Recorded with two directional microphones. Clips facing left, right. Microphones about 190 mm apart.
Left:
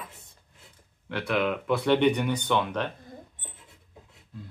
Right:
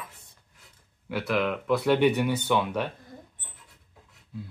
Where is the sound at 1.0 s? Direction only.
5° right (ahead or behind).